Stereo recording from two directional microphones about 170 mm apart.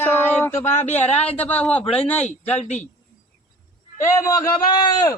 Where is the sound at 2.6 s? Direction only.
40° left (ahead or behind).